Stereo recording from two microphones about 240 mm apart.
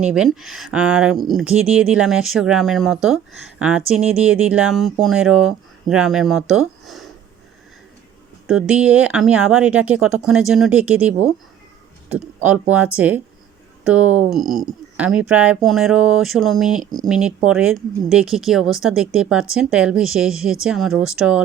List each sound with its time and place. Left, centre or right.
0.1 s speech: centre
8.4 s speech: centre